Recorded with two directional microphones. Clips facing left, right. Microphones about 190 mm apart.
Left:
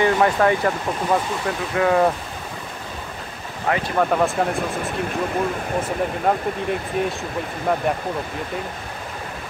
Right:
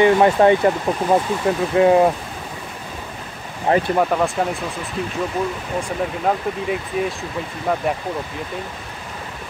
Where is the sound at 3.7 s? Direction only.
25° right (ahead or behind).